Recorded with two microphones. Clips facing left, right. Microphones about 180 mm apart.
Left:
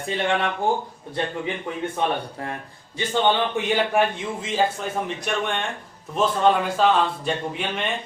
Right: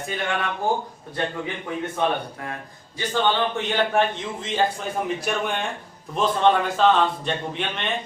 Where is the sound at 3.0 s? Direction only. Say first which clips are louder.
Left 1 dB; 20° left (ahead or behind).